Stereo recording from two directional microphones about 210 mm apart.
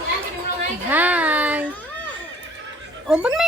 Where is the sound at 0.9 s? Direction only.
10° right (ahead or behind).